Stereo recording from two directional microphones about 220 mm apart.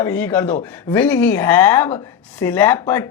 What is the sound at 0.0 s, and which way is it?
Speech, 10° left (ahead or behind).